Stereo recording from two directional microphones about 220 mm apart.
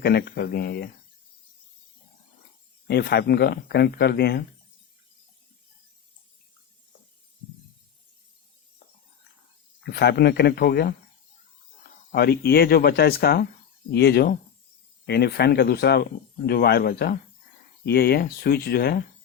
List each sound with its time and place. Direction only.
0.0 s speech: 45° left (ahead or behind)
2.8 s speech: 50° left (ahead or behind)
9.8 s speech: 50° left (ahead or behind)
12.1 s speech: 45° left (ahead or behind)